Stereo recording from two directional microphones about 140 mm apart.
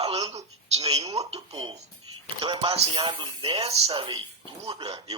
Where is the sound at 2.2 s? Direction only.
35° right (ahead or behind).